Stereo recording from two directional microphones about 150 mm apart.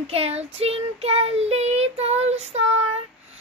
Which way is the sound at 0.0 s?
40° right (ahead or behind).